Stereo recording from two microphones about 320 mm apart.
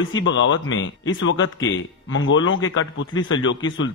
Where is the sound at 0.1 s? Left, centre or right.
Left.